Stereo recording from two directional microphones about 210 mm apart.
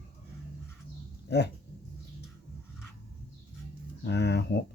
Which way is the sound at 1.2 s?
55° left (ahead or behind).